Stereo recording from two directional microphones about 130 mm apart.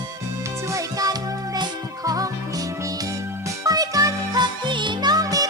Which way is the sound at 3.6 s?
30° right (ahead or behind).